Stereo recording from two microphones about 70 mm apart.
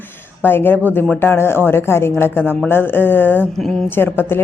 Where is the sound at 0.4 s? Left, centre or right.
Left.